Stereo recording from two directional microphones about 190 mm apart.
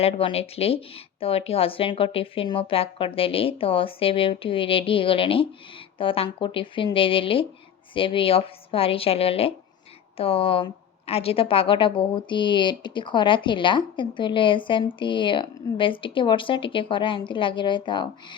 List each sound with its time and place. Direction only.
0.0 s a woman's voice: 30° left (ahead or behind)